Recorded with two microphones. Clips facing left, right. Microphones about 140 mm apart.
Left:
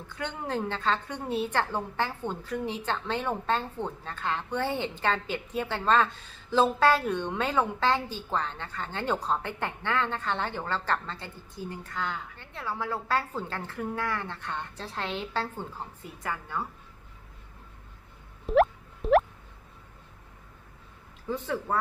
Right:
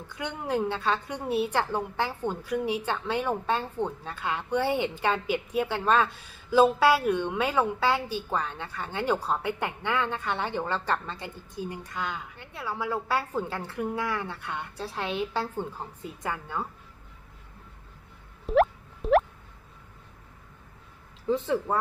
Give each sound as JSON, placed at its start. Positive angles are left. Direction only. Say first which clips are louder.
{"t": 0.2, "sound": "a woman's voice", "louder": "right 3 dB", "side_deg": -15}
{"t": 18.4, "sound": "a sound", "louder": "even", "side_deg": 0}
{"t": 21.2, "sound": "speech", "louder": "right 5 dB", "side_deg": -25}